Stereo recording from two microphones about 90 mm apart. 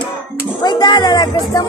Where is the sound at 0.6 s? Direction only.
50° left (ahead or behind).